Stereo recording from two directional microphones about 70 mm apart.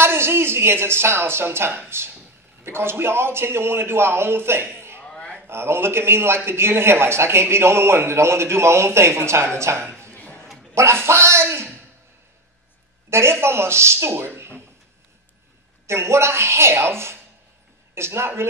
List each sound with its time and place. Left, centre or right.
0.0 s a man's voice: right
5.0 s a sound: centre
5.5 s a man's voice: right
10.0 s a sound: left
10.7 s a man's voice: right
13.1 s a man's voice: right
15.9 s a man's voice: right